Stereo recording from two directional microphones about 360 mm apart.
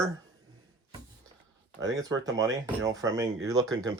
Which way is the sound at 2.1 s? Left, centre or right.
Centre.